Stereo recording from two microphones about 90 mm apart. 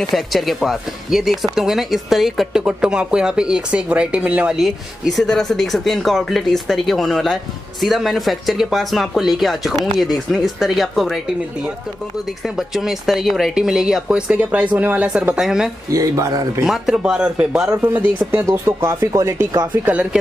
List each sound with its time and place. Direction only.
0.1 s speech: centre (ahead or behind)
12.5 s speech: 5° right (ahead or behind)
15.9 s speech: 35° right (ahead or behind)
16.6 s speech: 5° right (ahead or behind)
18.4 s speech: 25° right (ahead or behind)
19.7 s speech: 20° right (ahead or behind)